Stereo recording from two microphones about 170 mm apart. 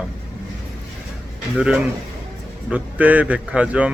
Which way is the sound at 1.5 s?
5° right (ahead or behind).